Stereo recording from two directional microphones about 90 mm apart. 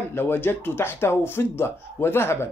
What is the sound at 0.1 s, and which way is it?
Speech, 25° left (ahead or behind).